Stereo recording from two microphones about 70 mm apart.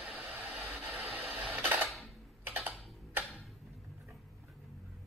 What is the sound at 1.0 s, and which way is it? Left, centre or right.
Printer, centre.